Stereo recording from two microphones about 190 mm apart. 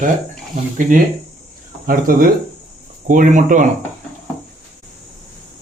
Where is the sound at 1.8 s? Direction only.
45° right (ahead or behind).